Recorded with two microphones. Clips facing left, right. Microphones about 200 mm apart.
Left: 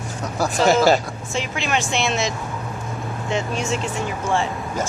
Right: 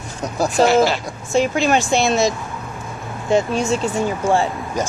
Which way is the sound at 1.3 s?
40° right (ahead or behind).